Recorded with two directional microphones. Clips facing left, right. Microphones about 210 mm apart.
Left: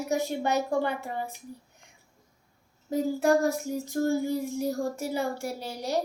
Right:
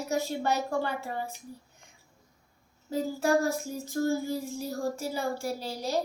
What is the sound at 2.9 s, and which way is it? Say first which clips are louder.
Child singing: left 3 dB; 20° left (ahead or behind).